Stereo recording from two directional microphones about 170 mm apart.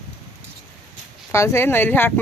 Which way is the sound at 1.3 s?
15° left (ahead or behind).